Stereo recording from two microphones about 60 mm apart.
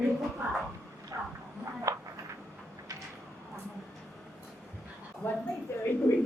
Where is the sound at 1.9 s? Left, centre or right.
Right.